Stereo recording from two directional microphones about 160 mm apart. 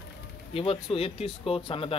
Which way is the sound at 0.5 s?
35° left (ahead or behind).